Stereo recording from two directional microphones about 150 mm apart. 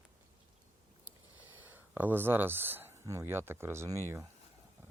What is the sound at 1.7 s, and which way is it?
Speech, 15° right (ahead or behind).